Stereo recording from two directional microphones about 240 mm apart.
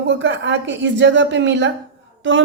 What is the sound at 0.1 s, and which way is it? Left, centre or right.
A woman's voice, right.